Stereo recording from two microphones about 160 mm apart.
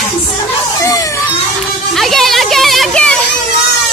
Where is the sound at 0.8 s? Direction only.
20° left (ahead or behind).